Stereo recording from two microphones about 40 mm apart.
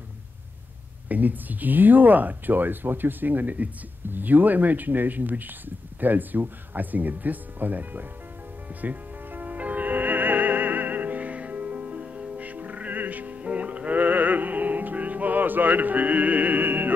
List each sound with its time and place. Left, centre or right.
1.0 s speech: right
8.8 s music: right
13.4 s music: right
13.9 s music: right